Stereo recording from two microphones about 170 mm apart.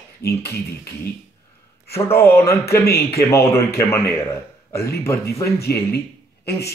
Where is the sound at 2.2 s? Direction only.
15° left (ahead or behind).